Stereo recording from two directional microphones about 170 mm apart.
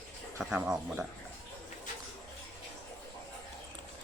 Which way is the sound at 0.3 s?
10° right (ahead or behind).